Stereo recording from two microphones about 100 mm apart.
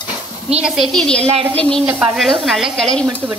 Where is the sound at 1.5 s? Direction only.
10° left (ahead or behind).